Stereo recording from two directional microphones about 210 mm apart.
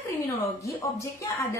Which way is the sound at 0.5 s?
15° left (ahead or behind).